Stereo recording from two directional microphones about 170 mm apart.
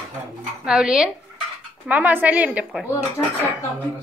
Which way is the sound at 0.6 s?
5° right (ahead or behind).